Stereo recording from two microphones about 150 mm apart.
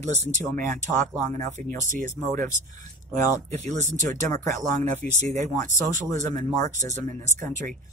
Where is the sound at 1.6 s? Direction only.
60° right (ahead or behind).